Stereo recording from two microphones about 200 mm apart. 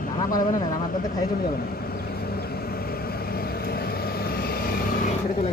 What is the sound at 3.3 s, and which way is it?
Vehicle, 50° left (ahead or behind).